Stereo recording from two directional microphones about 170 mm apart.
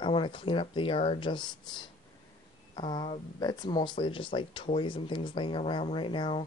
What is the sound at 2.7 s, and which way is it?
Speech, 25° left (ahead or behind).